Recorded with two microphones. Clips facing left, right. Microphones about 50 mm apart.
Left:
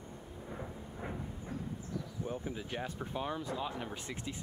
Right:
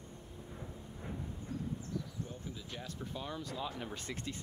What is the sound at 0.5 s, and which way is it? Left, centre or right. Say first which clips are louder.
Thunder: left 5 dB; left.